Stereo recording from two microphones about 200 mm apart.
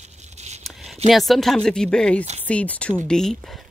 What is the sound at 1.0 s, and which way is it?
Speech, centre (ahead or behind).